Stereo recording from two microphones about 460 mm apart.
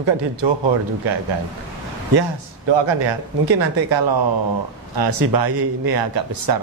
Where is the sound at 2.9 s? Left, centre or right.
Right.